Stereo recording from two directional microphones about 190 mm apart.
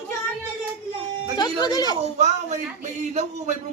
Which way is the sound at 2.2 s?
35° right (ahead or behind).